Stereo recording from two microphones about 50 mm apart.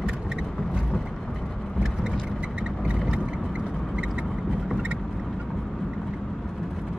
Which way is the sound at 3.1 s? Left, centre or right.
Right.